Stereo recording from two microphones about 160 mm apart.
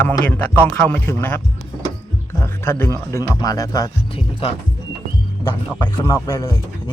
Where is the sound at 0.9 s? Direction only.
10° left (ahead or behind).